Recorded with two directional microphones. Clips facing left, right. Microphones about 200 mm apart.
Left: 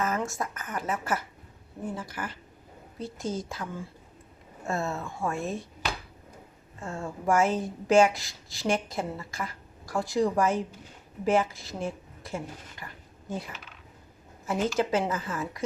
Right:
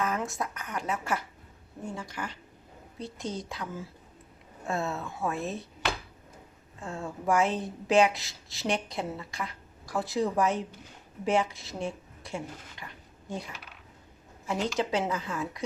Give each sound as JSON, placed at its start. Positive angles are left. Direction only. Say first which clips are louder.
{"t": 0.0, "sound": "speech", "louder": "left 1 dB", "side_deg": 0}
{"t": 6.7, "sound": "a woman's voice", "louder": "left 1 dB", "side_deg": 0}
{"t": 12.8, "sound": "a sound", "louder": "left 1 dB", "side_deg": 0}
{"t": 14.8, "sound": "speech", "louder": "left 2 dB", "side_deg": 0}